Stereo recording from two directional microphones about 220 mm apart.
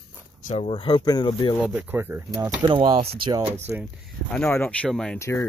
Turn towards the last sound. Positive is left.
turn(degrees=10)  # may be behind; listen again after turning